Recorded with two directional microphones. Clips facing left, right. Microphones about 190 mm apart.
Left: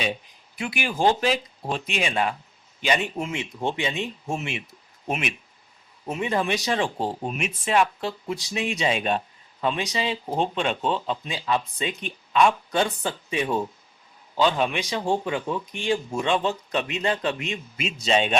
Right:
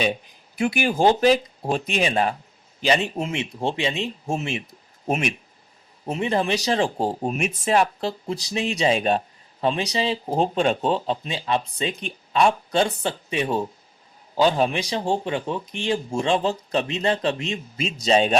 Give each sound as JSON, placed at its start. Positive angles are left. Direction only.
{"t": 0.6, "sound": "speech", "side_deg": -40}
{"t": 6.1, "sound": "speech", "side_deg": -30}